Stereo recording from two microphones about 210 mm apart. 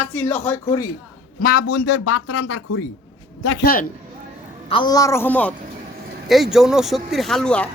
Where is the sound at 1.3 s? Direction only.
45° left (ahead or behind); by 2.9 s 65° left (ahead or behind).